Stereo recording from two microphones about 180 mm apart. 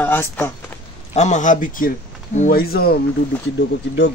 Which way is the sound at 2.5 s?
55° left (ahead or behind).